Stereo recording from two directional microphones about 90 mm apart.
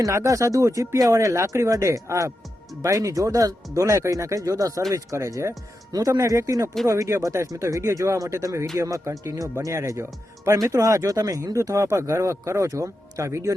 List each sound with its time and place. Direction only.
0.0 s speech: 35° right (ahead or behind)